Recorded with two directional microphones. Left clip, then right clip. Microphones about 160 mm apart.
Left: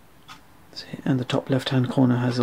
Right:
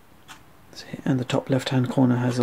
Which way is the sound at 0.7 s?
5° right (ahead or behind).